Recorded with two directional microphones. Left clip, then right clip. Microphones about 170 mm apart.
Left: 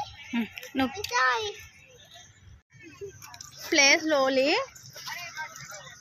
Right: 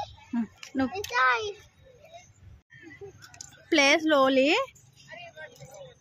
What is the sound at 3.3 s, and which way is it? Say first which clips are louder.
Speech: even; 45° right (ahead or behind).